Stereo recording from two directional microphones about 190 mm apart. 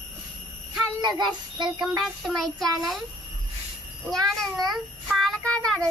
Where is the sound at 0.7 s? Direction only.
20° right (ahead or behind).